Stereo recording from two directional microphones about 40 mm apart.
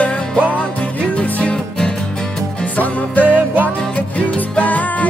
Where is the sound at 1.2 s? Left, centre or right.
Left.